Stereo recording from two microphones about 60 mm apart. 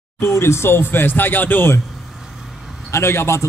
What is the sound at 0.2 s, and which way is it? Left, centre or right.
Speech, left.